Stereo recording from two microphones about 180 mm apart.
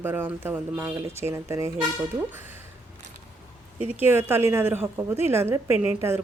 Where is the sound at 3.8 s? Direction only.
10° right (ahead or behind).